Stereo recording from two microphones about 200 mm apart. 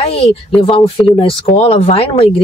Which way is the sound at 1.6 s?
30° left (ahead or behind).